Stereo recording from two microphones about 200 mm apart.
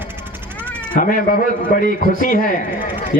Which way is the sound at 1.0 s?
45° left (ahead or behind).